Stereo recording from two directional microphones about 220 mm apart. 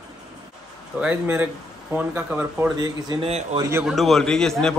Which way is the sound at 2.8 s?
20° right (ahead or behind).